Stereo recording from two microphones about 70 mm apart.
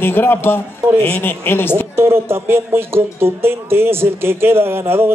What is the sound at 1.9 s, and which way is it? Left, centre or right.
Speech, right.